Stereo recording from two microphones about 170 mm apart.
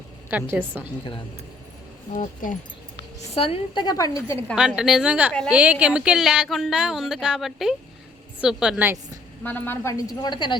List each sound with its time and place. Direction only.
0.3 s a woman's voice: 10° right (ahead or behind)
2.1 s speech: 50° left (ahead or behind)
3.3 s a woman's voice: 35° left (ahead or behind)
4.5 s speech: 5° right (ahead or behind)
9.4 s a woman's voice: 10° left (ahead or behind); by 10.6 s 25° left (ahead or behind)